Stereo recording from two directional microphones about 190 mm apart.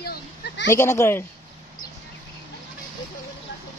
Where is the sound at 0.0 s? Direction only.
55° left (ahead or behind).